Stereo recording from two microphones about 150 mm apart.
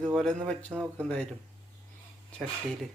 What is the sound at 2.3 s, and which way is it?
Speech, 5° left (ahead or behind).